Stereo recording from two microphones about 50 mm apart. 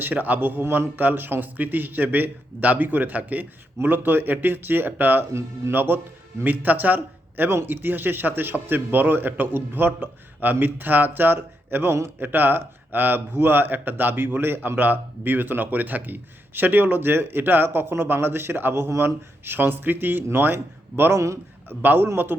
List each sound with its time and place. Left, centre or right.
0.0 s speech: right
18.7 s speech: right
19.5 s a man's voice: right
21.1 s a man's voice: right
21.7 s speech: right